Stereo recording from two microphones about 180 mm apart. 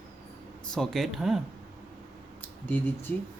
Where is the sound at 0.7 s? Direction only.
Centre (ahead or behind).